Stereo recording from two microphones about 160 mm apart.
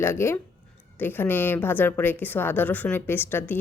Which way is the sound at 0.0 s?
15° left (ahead or behind).